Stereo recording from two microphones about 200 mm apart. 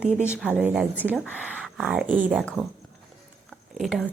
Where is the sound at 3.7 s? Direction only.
Centre (ahead or behind).